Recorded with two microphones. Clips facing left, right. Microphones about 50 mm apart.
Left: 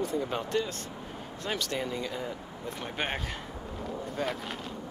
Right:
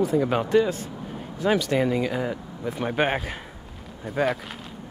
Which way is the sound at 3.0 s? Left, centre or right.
Centre.